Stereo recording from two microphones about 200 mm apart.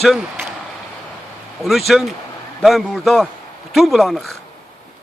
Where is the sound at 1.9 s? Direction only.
Centre (ahead or behind).